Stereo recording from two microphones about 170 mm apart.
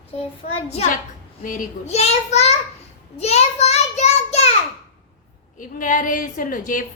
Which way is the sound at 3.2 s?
40° left (ahead or behind).